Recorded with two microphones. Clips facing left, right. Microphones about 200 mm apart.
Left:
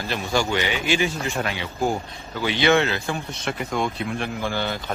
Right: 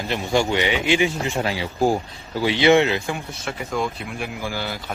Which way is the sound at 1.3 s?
30° right (ahead or behind).